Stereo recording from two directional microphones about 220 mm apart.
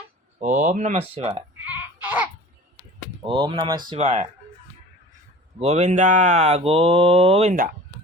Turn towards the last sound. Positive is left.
turn(degrees=-35)  # may be behind; listen again after turning